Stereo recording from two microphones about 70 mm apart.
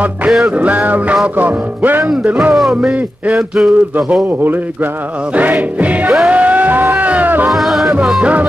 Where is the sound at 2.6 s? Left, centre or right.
Centre.